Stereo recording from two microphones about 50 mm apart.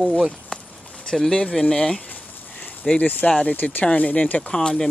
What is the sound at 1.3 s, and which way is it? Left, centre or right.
Speech, centre.